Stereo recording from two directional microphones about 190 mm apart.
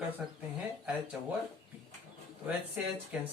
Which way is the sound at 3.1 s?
5° right (ahead or behind).